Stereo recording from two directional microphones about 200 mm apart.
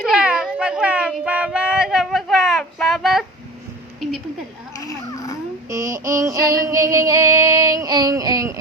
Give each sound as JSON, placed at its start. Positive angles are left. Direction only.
{"t": 0.0, "sound": "cat", "side_deg": -5}
{"t": 4.8, "sound": "a sound", "side_deg": 15}
{"t": 5.6, "sound": "child singing", "side_deg": -15}